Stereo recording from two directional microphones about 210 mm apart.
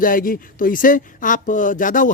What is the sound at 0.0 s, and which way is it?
Speech, 40° left (ahead or behind).